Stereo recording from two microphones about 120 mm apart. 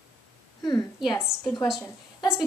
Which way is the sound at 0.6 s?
35° left (ahead or behind).